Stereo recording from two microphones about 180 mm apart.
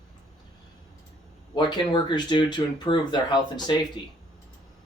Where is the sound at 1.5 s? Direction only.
25° left (ahead or behind).